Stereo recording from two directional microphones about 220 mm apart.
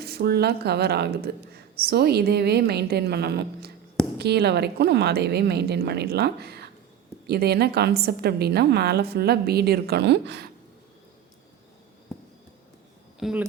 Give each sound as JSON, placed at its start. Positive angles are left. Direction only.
{"t": 0.0, "sound": "speech", "side_deg": -45}
{"t": 13.1, "sound": "speech", "side_deg": 0}